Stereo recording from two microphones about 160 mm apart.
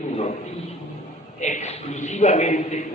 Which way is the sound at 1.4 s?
45° left (ahead or behind).